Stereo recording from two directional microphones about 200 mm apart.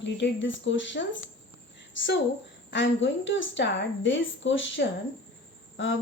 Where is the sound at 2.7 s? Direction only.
65° left (ahead or behind).